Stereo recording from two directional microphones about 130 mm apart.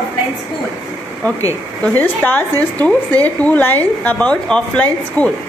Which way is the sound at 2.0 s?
15° left (ahead or behind).